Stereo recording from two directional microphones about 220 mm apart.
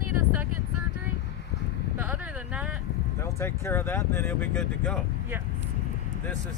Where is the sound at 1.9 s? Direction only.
5° right (ahead or behind).